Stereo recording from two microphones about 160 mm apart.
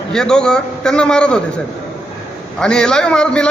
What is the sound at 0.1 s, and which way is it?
A man's voice, 5° left (ahead or behind).